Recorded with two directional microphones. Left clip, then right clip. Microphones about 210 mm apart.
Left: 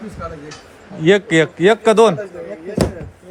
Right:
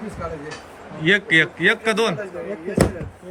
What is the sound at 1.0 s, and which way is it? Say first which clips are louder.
A man's voice: left 3 dB; 25° left (ahead or behind).